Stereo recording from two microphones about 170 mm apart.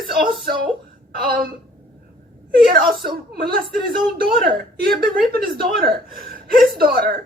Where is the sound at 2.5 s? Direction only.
60° right (ahead or behind).